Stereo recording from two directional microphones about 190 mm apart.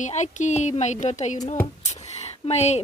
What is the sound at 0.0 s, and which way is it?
A woman's voice, 40° left (ahead or behind).